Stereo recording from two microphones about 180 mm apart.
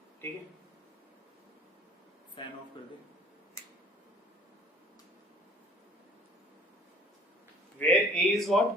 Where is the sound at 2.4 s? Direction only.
25° left (ahead or behind).